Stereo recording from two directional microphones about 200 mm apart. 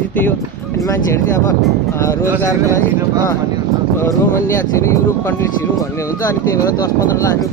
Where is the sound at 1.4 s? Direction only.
15° left (ahead or behind).